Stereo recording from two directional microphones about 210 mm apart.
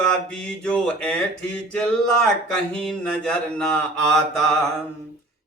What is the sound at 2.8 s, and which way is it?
Speech, 5° left (ahead or behind).